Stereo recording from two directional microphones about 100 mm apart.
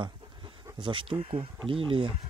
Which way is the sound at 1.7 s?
60° right (ahead or behind).